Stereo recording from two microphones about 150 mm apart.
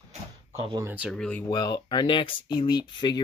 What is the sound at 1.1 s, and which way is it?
Speech, 5° left (ahead or behind).